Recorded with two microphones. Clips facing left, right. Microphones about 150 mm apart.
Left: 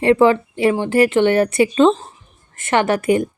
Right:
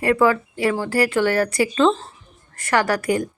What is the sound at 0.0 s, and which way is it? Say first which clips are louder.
Speech: left 5 dB; 25° left (ahead or behind).